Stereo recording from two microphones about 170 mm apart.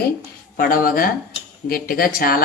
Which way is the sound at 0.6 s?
55° left (ahead or behind).